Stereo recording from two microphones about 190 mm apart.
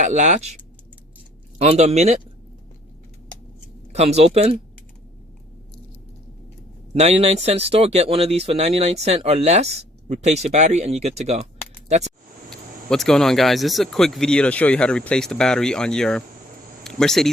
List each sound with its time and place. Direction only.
0.0 s speech: 40° right (ahead or behind)
1.5 s speech: 30° right (ahead or behind)
3.9 s speech: 35° right (ahead or behind)
6.9 s speech: 35° right (ahead or behind)
12.5 s speech: 5° left (ahead or behind)